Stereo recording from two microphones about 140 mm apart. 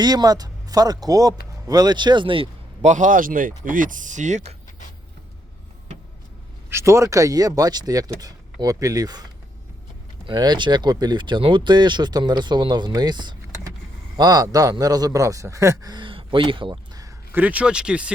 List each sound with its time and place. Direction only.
0.0 s a man's voice: 30° right (ahead or behind)
2.8 s speech: 65° right (ahead or behind)
6.7 s a man's voice: 20° right (ahead or behind)
10.2 s a man's voice: 30° right (ahead or behind)
17.3 s speech: 10° right (ahead or behind)